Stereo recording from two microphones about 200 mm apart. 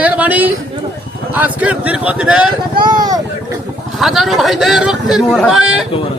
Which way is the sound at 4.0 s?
Centre (ahead or behind).